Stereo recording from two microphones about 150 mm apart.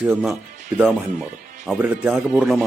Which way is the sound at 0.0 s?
10° right (ahead or behind).